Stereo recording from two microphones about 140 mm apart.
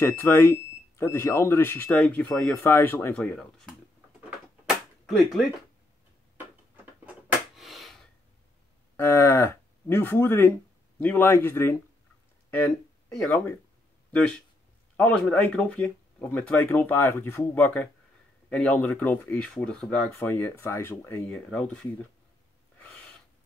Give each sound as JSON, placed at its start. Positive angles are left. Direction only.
{"t": 0.0, "sound": "speech", "side_deg": 15}
{"t": 3.2, "sound": "speech", "side_deg": 5}
{"t": 4.6, "sound": "a sound", "side_deg": 0}
{"t": 7.5, "sound": "a sound", "side_deg": 0}
{"t": 8.9, "sound": "speech", "side_deg": 20}
{"t": 12.4, "sound": "a sound", "side_deg": 10}
{"t": 13.1, "sound": "speech", "side_deg": 5}
{"t": 15.0, "sound": "speech", "side_deg": 5}
{"t": 20.3, "sound": "speech", "side_deg": 20}
{"t": 21.5, "sound": "speech", "side_deg": 5}